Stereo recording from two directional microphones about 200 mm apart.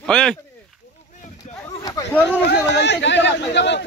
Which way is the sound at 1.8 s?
10° left (ahead or behind).